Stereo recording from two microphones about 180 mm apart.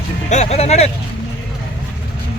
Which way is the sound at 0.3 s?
40° left (ahead or behind).